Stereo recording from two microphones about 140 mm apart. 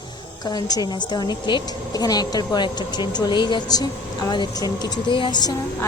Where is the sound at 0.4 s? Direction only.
30° left (ahead or behind).